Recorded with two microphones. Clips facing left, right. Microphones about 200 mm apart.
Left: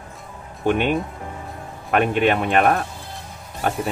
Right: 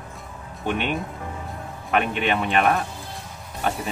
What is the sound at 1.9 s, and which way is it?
Speech, 45° left (ahead or behind).